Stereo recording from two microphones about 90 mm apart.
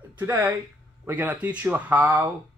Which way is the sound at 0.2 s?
20° right (ahead or behind).